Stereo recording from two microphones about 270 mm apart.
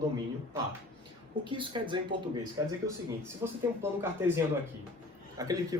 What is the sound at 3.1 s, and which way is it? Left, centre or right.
Speech, centre.